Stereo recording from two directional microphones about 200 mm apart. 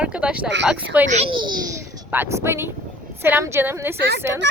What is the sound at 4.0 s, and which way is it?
Speech, 55° right (ahead or behind).